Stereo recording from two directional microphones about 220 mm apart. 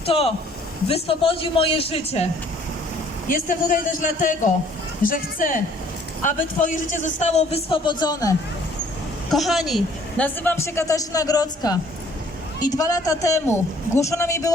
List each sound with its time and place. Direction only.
0.0 s a man's voice: 25° left (ahead or behind)
3.2 s a man's voice: 40° left (ahead or behind); by 8.4 s 15° left (ahead or behind)
9.3 s a woman's voice: centre (ahead or behind)